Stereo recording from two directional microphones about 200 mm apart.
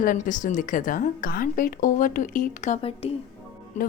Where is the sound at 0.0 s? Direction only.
40° left (ahead or behind).